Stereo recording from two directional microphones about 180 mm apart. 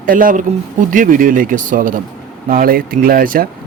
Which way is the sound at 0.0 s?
50° right (ahead or behind).